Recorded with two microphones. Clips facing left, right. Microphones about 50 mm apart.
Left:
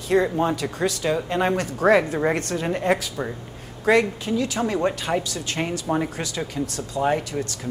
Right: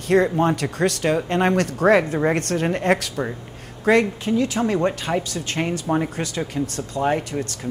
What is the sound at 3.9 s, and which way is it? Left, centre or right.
Speech, right.